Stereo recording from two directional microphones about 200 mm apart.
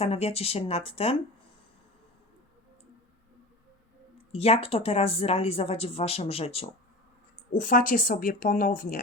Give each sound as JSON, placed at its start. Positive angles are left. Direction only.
{"t": 0.0, "sound": "speech", "side_deg": 30}
{"t": 4.3, "sound": "speech", "side_deg": 30}
{"t": 7.5, "sound": "speech", "side_deg": 40}